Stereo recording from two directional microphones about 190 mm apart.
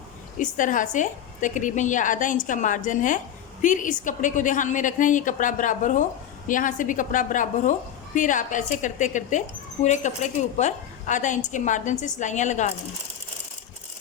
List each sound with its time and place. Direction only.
0.3 s a woman's voice: 45° left (ahead or behind)